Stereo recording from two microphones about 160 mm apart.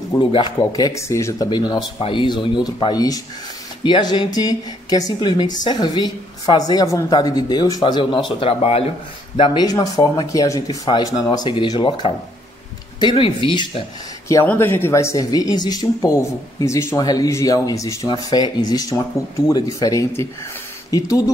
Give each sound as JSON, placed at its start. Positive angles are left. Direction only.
{"t": 0.1, "sound": "speech", "side_deg": 30}
{"t": 9.4, "sound": "speech", "side_deg": 30}
{"t": 14.3, "sound": "speech", "side_deg": 15}